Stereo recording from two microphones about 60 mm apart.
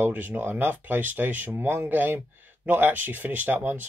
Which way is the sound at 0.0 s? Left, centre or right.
Right.